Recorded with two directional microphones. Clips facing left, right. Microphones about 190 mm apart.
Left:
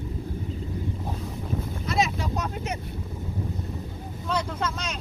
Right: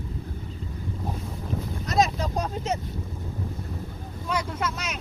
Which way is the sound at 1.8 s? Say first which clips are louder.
Right 3 dB; 40° right (ahead or behind).